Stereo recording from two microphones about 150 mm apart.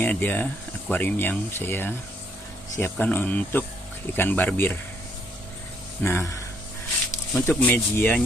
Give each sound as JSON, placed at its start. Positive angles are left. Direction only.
{"t": 0.0, "sound": "speech", "side_deg": 10}
{"t": 6.0, "sound": "speech", "side_deg": 15}
{"t": 7.3, "sound": "speech", "side_deg": 15}